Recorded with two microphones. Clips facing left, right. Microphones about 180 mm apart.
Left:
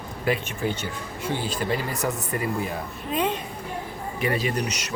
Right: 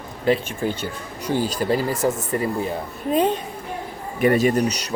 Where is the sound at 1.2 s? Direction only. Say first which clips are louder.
Right 5 dB; 40° right (ahead or behind).